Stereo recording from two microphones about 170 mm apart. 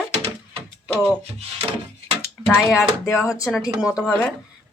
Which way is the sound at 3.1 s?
20° left (ahead or behind).